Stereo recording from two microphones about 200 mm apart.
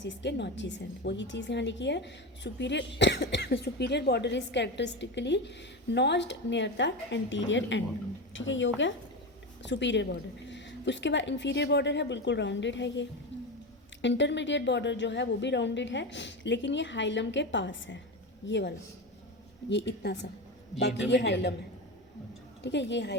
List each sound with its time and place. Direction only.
0.0 s a woman's voice: 60° left (ahead or behind)
13.3 s squish: 65° left (ahead or behind)
14.0 s a woman's voice: 60° left (ahead or behind)
19.7 s a woman's voice: 55° left (ahead or behind)
22.6 s a woman's voice: 60° left (ahead or behind)